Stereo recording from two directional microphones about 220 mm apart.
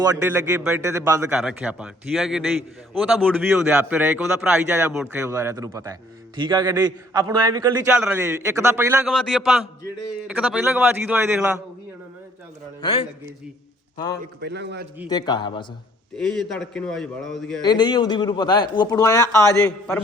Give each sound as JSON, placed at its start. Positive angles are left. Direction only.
{"t": 0.0, "sound": "a man's voice", "side_deg": -15}
{"t": 9.0, "sound": "a man's voice", "side_deg": 0}
{"t": 12.8, "sound": "a man's voice", "side_deg": 25}
{"t": 14.4, "sound": "a man's voice", "side_deg": -50}
{"t": 15.1, "sound": "speech", "side_deg": 20}
{"t": 16.1, "sound": "a man's voice", "side_deg": 5}
{"t": 17.6, "sound": "speech", "side_deg": 20}